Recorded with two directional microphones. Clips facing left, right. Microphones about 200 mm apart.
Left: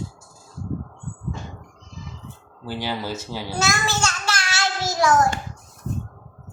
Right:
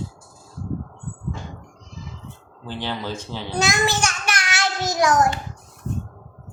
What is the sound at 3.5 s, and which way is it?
Child singing, 20° right (ahead or behind).